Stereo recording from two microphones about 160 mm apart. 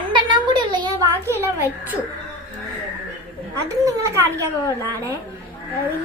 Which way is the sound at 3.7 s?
20° right (ahead or behind).